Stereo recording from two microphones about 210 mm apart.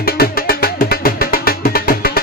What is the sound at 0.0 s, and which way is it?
Music, 45° left (ahead or behind).